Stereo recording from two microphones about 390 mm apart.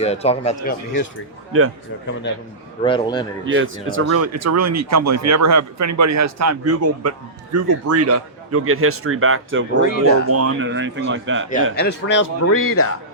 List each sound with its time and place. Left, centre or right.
0.0 s speech: centre
2.3 s a man's voice: left
2.8 s speech: centre
3.4 s speech: right
4.0 s speech: right
11.8 s speech: left